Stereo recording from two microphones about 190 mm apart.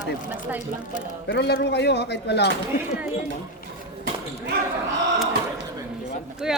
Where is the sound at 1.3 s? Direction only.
60° left (ahead or behind).